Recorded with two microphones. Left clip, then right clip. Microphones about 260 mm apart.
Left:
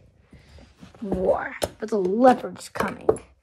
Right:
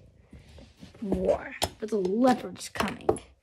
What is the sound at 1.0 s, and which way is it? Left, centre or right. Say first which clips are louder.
Speech: left 4 dB; left.